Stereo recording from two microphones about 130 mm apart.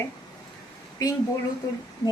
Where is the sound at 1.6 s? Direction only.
30° left (ahead or behind).